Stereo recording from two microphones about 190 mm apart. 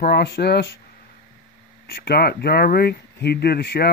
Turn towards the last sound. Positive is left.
turn(degrees=55)  # may be behind; listen again after turning